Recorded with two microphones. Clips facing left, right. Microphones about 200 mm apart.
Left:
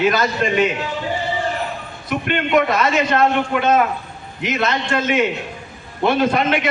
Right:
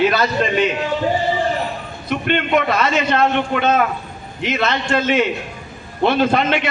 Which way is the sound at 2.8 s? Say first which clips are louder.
Even; 30° right (ahead or behind).